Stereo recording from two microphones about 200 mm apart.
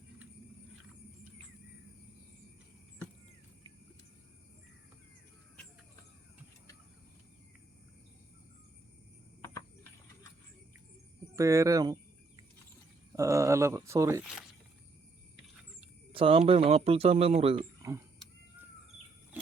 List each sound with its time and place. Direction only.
11.3 s speech: 15° right (ahead or behind)
13.1 s speech: 15° right (ahead or behind)
16.1 s speech: 25° right (ahead or behind)